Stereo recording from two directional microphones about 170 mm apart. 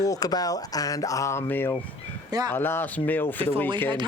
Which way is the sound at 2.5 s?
10° left (ahead or behind).